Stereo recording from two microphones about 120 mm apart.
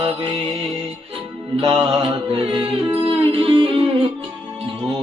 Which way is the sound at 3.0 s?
50° right (ahead or behind).